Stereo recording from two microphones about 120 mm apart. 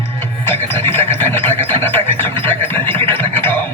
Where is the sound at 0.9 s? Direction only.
20° left (ahead or behind).